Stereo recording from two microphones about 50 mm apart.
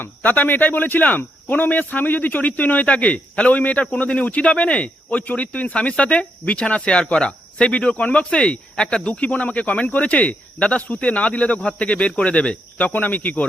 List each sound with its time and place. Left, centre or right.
0.2 s speech: left